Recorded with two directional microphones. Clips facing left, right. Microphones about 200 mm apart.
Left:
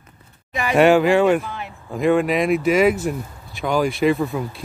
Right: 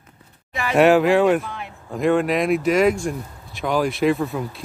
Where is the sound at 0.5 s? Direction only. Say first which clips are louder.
Left 2 dB; 20° left (ahead or behind).